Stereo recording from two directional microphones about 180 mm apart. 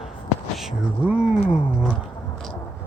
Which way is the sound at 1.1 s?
5° right (ahead or behind).